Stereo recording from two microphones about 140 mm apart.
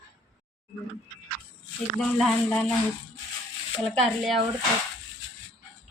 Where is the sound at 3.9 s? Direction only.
Centre (ahead or behind).